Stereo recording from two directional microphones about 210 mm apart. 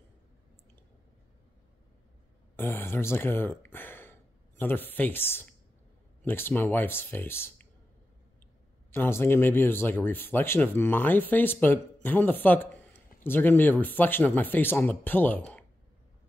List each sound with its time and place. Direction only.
2.5 s speech: 10° left (ahead or behind)
8.9 s speech: 10° left (ahead or behind)